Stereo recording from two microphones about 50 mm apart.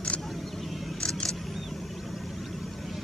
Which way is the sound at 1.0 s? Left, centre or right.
Left.